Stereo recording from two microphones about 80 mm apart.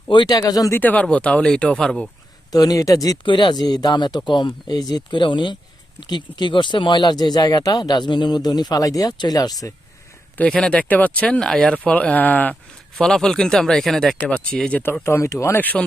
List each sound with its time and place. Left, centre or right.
0.1 s speech: left
0.3 s speech: left
0.7 s speech: left
2.5 s speech: left
3.2 s speech: left
5.1 s speech: left
6.0 s speech: left
10.5 s speech: centre
13.0 s speech: centre
15.0 s speech: left
15.5 s speech: left